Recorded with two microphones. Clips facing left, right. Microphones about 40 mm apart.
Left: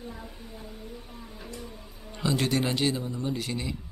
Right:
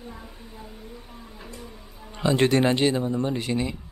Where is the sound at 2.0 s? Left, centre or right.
Centre.